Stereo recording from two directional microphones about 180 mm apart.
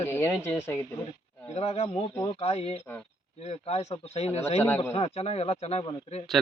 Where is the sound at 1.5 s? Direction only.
35° left (ahead or behind).